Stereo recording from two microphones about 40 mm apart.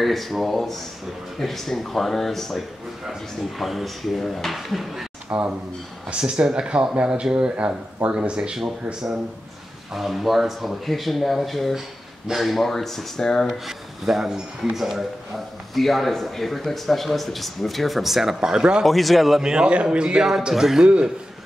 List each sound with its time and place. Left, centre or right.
0.0 s speech: centre
5.3 s speech: right
9.9 s speech: centre
13.7 s speech: centre
18.9 s speech: centre
19.4 s speech: centre
19.7 s speech: right
20.5 s speech: centre
20.8 s speech: right